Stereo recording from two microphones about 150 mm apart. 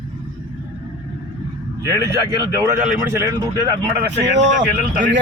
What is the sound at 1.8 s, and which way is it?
Speech, 20° right (ahead or behind).